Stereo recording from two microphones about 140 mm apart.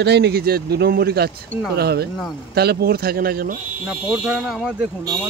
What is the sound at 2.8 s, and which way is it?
Speech, 90° right.